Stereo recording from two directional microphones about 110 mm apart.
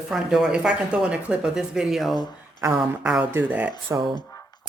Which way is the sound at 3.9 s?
25° right (ahead or behind).